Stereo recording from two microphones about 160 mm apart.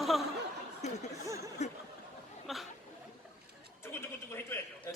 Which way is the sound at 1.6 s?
45° left (ahead or behind).